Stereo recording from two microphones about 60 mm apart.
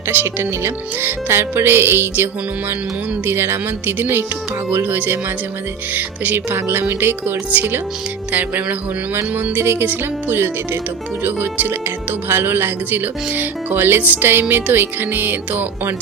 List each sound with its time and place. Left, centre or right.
0.1 s speech: right